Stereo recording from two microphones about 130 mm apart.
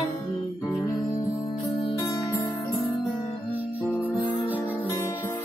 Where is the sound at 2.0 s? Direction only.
30° left (ahead or behind).